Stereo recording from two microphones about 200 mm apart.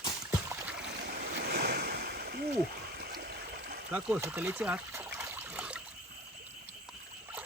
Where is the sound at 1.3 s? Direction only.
50° right (ahead or behind).